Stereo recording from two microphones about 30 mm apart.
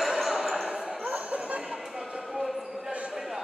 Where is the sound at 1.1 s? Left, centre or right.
Right.